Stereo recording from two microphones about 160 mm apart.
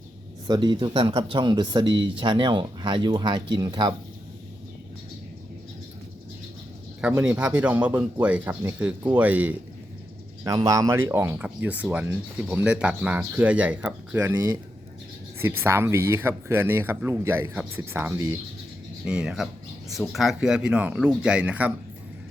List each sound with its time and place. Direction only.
0.4 s speech: 25° right (ahead or behind)
7.0 s speech: 10° right (ahead or behind)
10.4 s speech: 25° right (ahead or behind)
19.0 s speech: 5° right (ahead or behind)